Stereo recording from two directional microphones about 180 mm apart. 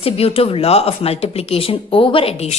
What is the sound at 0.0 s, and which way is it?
A woman's voice, 30° left (ahead or behind).